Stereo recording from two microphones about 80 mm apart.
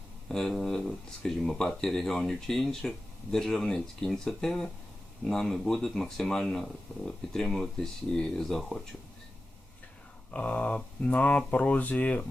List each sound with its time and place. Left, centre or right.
0.3 s speech: centre
10.3 s speech: centre